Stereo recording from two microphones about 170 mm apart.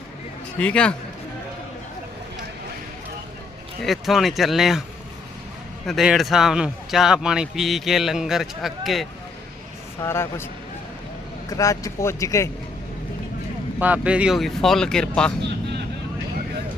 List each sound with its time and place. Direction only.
0.6 s a man's voice: 5° left (ahead or behind)
3.8 s a man's voice: centre (ahead or behind)
5.8 s a man's voice: centre (ahead or behind)
10.0 s a man's voice: 15° left (ahead or behind)
13.7 s a man's voice: 10° right (ahead or behind)